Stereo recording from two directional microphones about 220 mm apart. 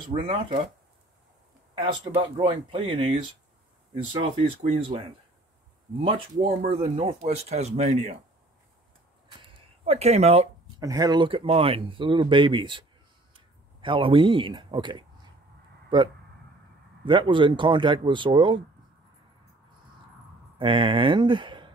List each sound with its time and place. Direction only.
0.1 s speech: 30° right (ahead or behind)
1.8 s speech: 25° right (ahead or behind)
9.4 s a sound: 30° right (ahead or behind)
10.8 s speech: 15° right (ahead or behind)
17.0 s speech: 20° right (ahead or behind)
20.5 s speech: 20° right (ahead or behind)